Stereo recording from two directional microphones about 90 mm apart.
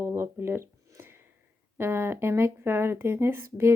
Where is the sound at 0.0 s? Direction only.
30° right (ahead or behind).